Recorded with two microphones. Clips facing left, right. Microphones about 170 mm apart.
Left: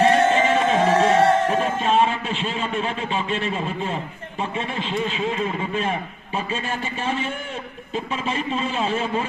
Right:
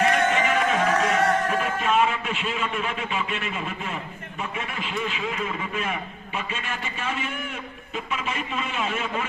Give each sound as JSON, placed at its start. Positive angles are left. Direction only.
{"t": 0.0, "sound": "music", "side_deg": 30}
{"t": 7.9, "sound": "a man's voice", "side_deg": 30}